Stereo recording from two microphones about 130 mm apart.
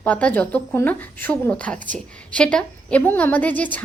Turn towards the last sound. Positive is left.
turn(degrees=10)  # may be behind; listen again after turning